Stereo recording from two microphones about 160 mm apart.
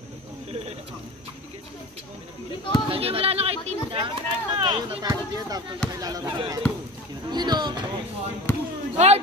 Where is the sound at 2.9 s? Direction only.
35° right (ahead or behind).